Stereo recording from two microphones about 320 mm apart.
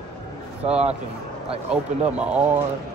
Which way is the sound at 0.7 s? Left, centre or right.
Centre.